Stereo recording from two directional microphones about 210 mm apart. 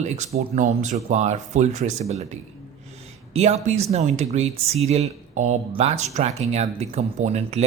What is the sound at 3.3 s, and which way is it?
Speech, 30° right (ahead or behind).